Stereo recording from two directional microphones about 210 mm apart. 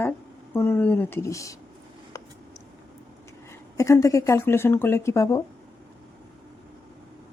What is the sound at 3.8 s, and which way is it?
Speech, 15° left (ahead or behind).